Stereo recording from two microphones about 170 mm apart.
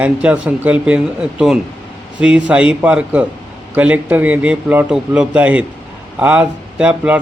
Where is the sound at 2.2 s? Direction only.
5° right (ahead or behind).